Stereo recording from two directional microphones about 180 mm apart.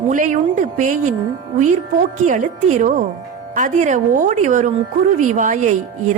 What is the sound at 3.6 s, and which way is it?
A woman's voice, 45° right (ahead or behind).